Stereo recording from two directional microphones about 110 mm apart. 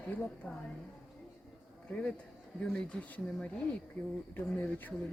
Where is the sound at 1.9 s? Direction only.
10° left (ahead or behind).